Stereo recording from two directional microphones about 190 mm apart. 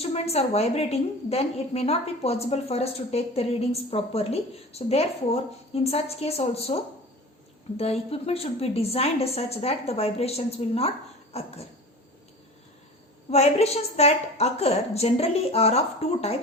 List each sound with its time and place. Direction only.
0.0 s a woman's voice: 35° left (ahead or behind)
13.3 s a woman's voice: 35° left (ahead or behind)